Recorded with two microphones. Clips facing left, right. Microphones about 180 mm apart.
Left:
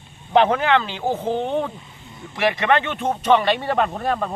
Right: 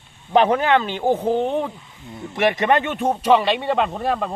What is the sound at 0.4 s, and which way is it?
Speech, 15° right (ahead or behind).